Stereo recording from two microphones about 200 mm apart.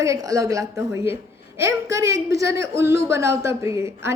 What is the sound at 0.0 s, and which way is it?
A woman's voice, 15° right (ahead or behind).